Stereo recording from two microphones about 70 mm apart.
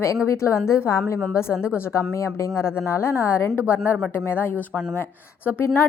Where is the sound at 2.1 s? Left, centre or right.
Left.